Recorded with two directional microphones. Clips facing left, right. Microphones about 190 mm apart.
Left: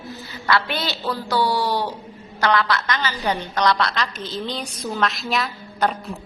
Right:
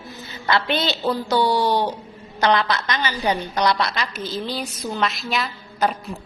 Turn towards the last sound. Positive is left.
turn(degrees=0)  # may be behind; listen again after turning